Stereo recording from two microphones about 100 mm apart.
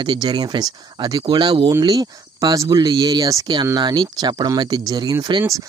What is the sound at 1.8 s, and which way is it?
Speech, 40° right (ahead or behind).